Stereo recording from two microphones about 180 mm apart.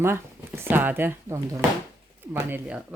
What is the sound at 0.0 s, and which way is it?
Speech, 15° right (ahead or behind).